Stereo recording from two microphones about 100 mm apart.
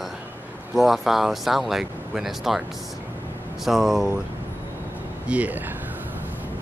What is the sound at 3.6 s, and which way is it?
Speech, centre (ahead or behind).